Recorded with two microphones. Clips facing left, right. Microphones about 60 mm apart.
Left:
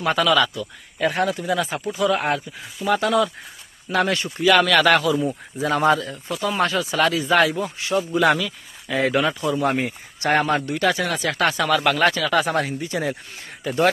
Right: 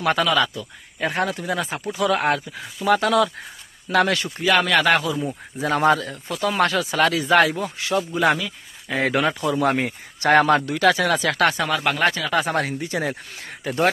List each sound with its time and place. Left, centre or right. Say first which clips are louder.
0.2 s speech: left 2 dB; right
2.0 s speech: right 1 dB; right
4.4 s speech: left 3 dB; right
5.1 s speech: left 4 dB; centre
5.6 s speech: even; right
6.3 s speech: right 1 dB; right
8.1 s speech: left 3 dB; centre
8.9 s speech: left 1 dB; right
11.5 s speech: left 3 dB; right
12.6 s speech: even; right